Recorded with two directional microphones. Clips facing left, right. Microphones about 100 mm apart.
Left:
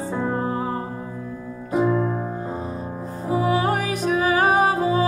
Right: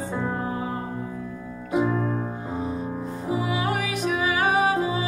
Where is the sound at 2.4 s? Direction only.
35° left (ahead or behind).